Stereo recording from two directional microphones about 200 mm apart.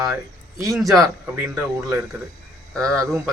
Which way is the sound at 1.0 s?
10° right (ahead or behind).